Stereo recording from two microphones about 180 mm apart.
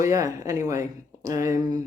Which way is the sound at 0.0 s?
15° right (ahead or behind).